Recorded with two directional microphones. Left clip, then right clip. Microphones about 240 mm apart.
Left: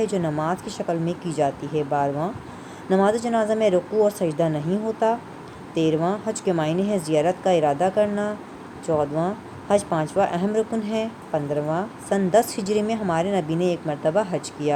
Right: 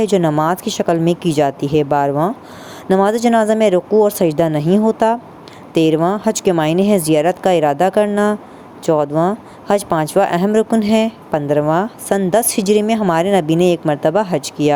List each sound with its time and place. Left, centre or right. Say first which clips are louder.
0.0 s speech: right 10 dB; right